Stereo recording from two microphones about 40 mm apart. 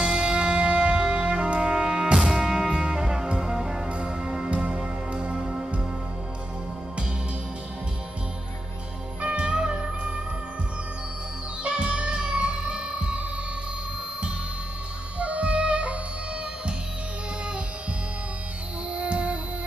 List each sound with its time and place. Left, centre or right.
0.0 s music: right
2.1 s music: centre
9.2 s music: right
11.6 s music: right
15.1 s music: right
18.9 s music: right